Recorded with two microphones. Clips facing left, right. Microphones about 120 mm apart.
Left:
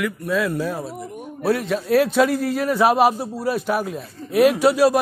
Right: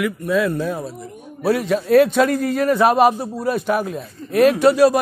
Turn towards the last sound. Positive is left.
turn(degrees=5)  # may be behind; listen again after turning